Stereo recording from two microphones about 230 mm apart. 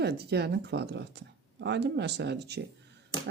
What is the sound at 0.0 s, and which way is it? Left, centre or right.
Speech, right.